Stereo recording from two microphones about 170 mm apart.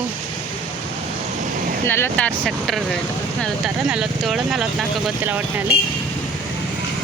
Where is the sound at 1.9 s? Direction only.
10° left (ahead or behind).